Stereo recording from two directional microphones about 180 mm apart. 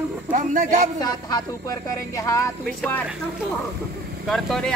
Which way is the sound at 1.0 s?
20° left (ahead or behind).